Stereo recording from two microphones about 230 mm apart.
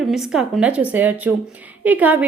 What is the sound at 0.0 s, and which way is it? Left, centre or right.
A woman's voice, centre.